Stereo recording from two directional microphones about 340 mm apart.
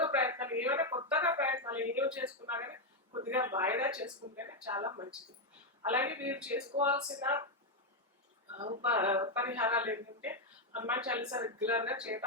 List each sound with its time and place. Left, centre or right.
0.0 s a sound: centre
4.4 s speech: centre
8.5 s speech: centre